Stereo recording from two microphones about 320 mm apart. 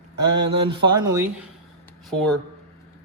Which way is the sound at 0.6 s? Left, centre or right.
Centre.